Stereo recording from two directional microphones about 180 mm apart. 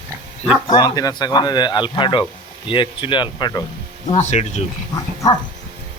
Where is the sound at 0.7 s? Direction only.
20° left (ahead or behind).